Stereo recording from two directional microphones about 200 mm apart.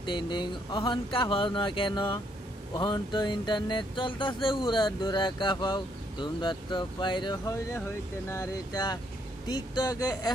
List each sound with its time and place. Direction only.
0.0 s music: 20° left (ahead or behind)